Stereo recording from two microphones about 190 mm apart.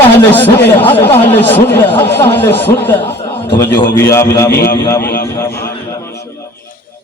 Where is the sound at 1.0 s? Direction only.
10° left (ahead or behind).